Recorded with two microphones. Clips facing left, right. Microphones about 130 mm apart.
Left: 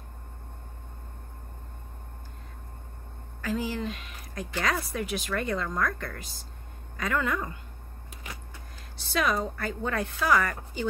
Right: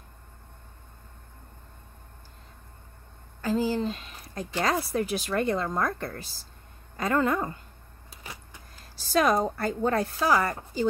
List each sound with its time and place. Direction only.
3.3 s speech: 30° right (ahead or behind)
8.9 s speech: 40° right (ahead or behind)